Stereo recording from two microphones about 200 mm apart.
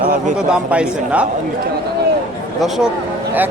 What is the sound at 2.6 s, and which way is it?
Speech, centre (ahead or behind).